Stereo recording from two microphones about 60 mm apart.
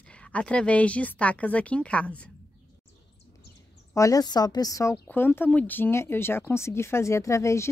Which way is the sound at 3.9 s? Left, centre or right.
Left.